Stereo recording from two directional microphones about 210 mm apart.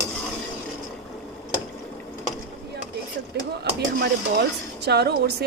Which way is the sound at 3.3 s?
50° right (ahead or behind).